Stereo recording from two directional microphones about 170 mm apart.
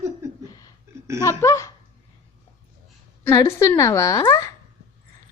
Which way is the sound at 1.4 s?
15° left (ahead or behind).